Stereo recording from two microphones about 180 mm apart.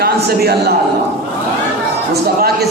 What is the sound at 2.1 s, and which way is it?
Speech, 60° right (ahead or behind).